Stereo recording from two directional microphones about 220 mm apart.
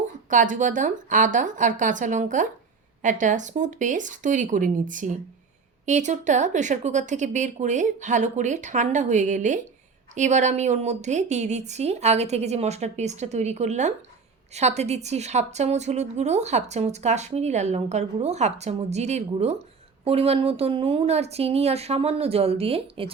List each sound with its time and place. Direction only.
0.3 s a woman's voice: 35° right (ahead or behind)